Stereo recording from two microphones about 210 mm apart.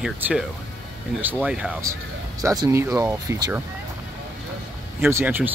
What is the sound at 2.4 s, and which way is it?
Speech, 15° right (ahead or behind).